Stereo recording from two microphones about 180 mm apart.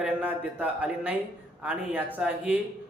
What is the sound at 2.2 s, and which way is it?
Speech, 5° right (ahead or behind).